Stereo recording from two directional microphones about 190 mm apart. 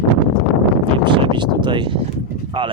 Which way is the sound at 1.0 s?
25° right (ahead or behind).